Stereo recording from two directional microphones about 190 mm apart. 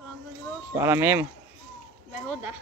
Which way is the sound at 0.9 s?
10° right (ahead or behind).